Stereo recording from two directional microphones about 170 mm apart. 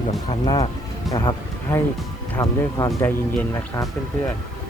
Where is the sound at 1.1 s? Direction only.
20° left (ahead or behind).